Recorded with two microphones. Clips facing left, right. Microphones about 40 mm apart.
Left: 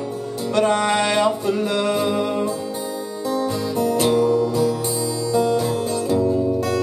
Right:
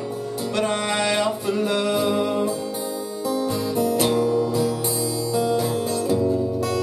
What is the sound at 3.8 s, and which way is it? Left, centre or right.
Music, centre.